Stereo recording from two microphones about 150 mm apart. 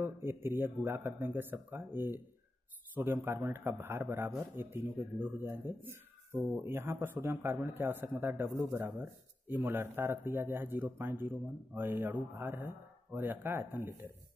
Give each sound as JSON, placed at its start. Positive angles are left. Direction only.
{"t": 0.0, "sound": "speech", "side_deg": -15}